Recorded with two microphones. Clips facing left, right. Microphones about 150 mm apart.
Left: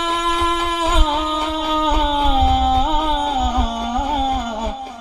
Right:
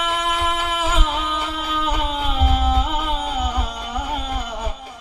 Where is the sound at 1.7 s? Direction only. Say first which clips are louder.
Left 5 dB; 35° left (ahead or behind).